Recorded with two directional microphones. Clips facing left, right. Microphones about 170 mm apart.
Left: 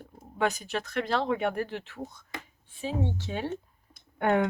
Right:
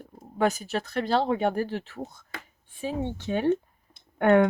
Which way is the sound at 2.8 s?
55° right (ahead or behind).